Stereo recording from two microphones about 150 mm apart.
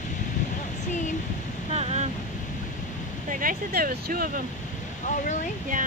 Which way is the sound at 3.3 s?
70° right (ahead or behind).